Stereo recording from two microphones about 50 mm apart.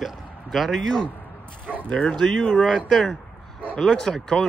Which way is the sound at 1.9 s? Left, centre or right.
Centre.